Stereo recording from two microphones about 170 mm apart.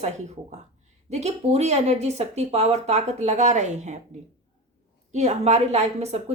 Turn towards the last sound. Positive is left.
turn(degrees=-40)  # may be behind; listen again after turning